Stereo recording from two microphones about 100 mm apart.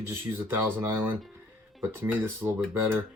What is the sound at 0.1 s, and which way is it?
Speech, 25° right (ahead or behind).